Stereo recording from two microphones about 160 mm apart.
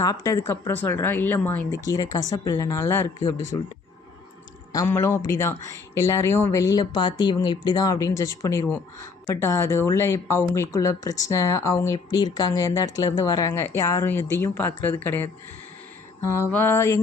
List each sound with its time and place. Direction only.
0.0 s speech: 20° left (ahead or behind)
4.7 s speech: 20° left (ahead or behind)